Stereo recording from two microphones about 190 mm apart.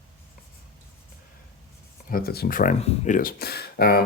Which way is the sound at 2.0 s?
50° left (ahead or behind).